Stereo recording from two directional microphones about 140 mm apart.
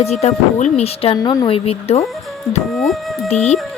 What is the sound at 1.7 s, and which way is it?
Speech, 45° left (ahead or behind).